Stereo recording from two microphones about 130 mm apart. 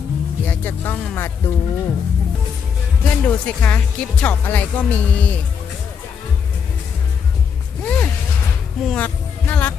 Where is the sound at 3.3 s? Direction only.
10° left (ahead or behind).